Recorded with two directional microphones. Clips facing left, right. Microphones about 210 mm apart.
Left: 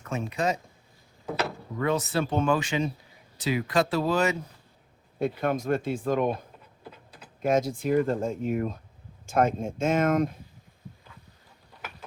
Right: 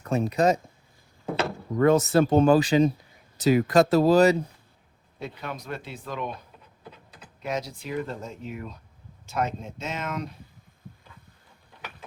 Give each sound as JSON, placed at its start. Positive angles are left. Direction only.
{"t": 0.0, "sound": "speech", "side_deg": -35}
{"t": 1.8, "sound": "speech", "side_deg": -45}
{"t": 5.2, "sound": "speech", "side_deg": 50}
{"t": 7.4, "sound": "speech", "side_deg": 50}